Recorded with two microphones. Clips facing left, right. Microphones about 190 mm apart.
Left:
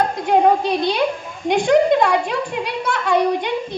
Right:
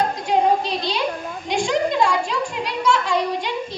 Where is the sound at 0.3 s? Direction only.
55° left (ahead or behind).